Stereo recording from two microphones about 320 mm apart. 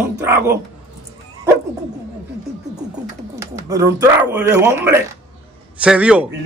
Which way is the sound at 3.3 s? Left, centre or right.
Centre.